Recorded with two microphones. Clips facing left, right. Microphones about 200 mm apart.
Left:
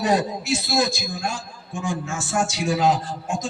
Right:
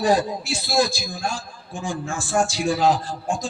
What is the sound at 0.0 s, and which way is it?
A man's voice, 30° right (ahead or behind).